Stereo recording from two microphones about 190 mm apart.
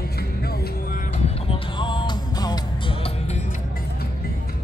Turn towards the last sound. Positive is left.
turn(degrees=30)  # may be behind; listen again after turning